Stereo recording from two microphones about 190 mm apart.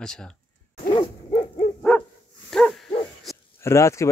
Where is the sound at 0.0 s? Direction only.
5° left (ahead or behind).